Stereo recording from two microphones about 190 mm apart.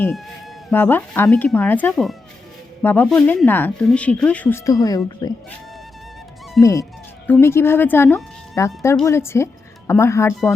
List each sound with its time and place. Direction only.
0.7 s speech: 10° left (ahead or behind)
6.6 s speech: 15° left (ahead or behind)